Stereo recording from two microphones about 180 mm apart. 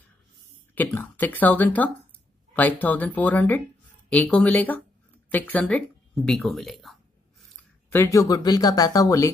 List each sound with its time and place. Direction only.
0.7 s speech: 10° left (ahead or behind)
7.9 s speech: 15° left (ahead or behind)